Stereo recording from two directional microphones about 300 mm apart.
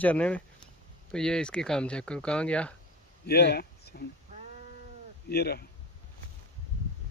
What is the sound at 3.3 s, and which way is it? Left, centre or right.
Speech, left.